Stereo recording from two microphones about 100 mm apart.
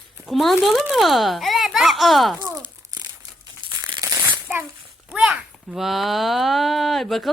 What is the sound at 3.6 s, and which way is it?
Crumpling, 55° right (ahead or behind).